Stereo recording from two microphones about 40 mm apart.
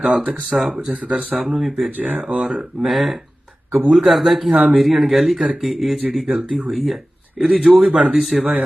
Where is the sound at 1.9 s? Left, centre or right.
Right.